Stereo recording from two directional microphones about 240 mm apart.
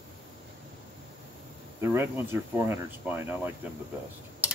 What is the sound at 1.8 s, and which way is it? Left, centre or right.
Speech, centre.